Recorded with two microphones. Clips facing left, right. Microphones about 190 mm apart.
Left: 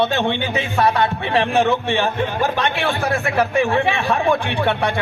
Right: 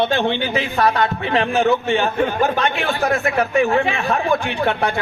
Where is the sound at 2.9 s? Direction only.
30° left (ahead or behind).